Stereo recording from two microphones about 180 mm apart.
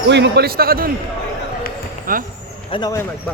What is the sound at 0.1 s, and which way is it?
Speech, 65° right (ahead or behind).